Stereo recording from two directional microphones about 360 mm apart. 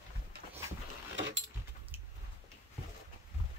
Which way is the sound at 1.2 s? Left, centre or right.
Right.